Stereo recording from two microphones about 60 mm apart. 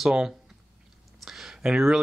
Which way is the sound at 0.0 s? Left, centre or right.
Centre.